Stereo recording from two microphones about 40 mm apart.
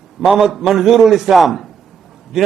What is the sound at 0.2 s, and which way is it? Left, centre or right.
A man's voice, centre.